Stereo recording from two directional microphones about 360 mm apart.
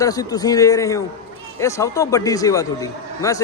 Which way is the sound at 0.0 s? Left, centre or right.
Centre.